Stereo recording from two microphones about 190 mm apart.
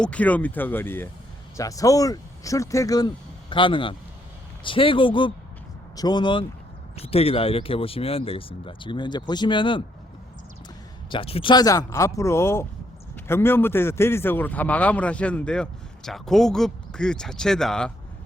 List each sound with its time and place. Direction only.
0.0 s a man's voice: 5° left (ahead or behind); by 9.8 s 25° left (ahead or behind)
11.1 s a man's voice: 30° left (ahead or behind); by 17.9 s 5° left (ahead or behind)